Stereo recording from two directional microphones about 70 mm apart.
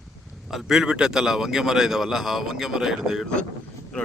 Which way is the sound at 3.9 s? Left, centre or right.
Centre.